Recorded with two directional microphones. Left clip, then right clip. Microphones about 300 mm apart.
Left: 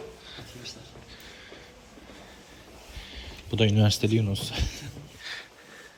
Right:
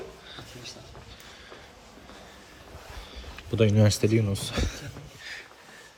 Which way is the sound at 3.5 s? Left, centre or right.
Centre.